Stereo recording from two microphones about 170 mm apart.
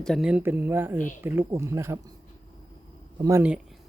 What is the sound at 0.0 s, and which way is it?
Speech, centre (ahead or behind).